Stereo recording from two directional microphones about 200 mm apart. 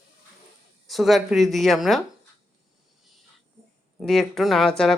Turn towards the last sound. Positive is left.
turn(degrees=0)  # may be behind; listen again after turning